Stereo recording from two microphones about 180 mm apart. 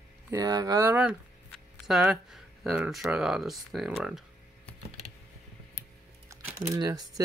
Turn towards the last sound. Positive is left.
turn(degrees=-20)  # may be behind; listen again after turning